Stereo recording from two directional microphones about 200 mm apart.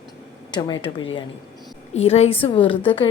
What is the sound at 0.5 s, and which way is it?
A woman's voice, 20° left (ahead or behind).